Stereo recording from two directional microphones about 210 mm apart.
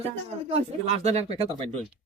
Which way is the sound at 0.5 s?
30° right (ahead or behind).